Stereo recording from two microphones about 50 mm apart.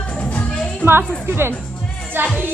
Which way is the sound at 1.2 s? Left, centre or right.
Right.